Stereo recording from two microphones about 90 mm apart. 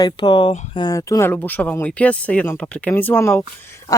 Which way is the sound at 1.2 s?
20° left (ahead or behind).